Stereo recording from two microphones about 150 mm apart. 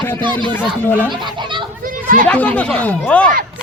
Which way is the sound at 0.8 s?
15° left (ahead or behind).